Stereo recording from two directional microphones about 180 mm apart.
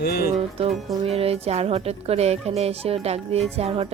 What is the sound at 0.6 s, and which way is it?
Speech, 35° right (ahead or behind).